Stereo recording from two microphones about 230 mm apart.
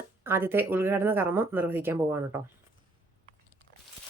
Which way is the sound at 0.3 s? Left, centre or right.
Centre.